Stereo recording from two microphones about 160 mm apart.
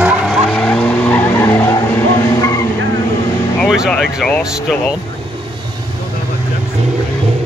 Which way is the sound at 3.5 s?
Centre (ahead or behind).